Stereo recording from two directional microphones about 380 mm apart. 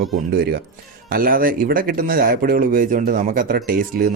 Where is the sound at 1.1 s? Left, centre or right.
Right.